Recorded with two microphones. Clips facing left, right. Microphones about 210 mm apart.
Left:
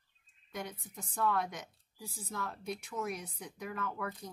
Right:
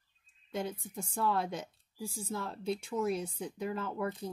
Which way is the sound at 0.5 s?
30° right (ahead or behind).